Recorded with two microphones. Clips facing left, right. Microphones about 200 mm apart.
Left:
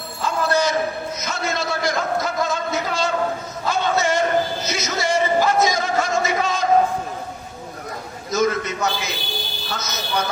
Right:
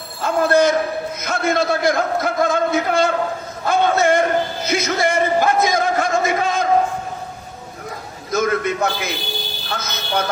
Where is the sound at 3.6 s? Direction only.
55° right (ahead or behind).